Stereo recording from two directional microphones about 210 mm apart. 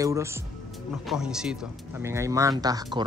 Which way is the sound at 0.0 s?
15° right (ahead or behind).